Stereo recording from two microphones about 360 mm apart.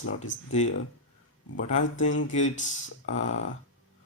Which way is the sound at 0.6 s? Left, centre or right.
Centre.